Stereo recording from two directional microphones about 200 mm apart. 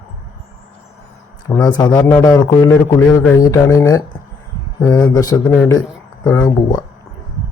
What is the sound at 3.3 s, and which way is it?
A man's voice, 15° left (ahead or behind).